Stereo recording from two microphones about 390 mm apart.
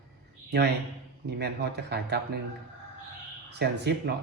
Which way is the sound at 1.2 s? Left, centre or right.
Right.